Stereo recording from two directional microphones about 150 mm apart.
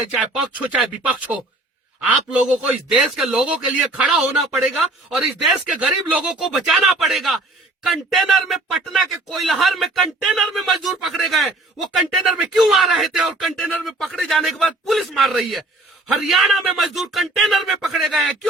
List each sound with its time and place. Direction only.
0.1 s speech: 10° right (ahead or behind)